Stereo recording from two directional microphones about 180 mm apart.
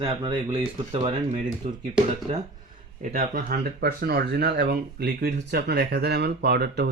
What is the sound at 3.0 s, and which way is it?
Speech, 45° right (ahead or behind).